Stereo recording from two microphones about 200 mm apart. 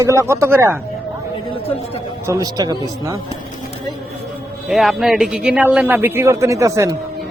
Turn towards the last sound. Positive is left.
turn(degrees=-15)  # may be behind; listen again after turning